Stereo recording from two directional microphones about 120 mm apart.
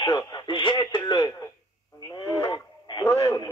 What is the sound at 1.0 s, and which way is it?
Speech, 30° left (ahead or behind).